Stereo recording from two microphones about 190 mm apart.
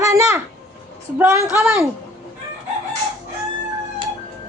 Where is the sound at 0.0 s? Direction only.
15° right (ahead or behind).